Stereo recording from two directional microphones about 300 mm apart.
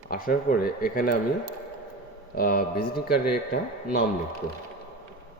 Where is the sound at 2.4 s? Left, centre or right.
Left.